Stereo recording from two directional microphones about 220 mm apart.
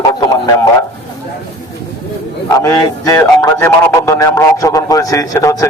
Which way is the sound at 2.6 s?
15° left (ahead or behind).